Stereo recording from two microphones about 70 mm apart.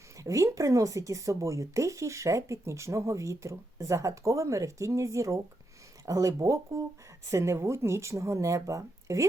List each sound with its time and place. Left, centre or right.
0.2 s speech: right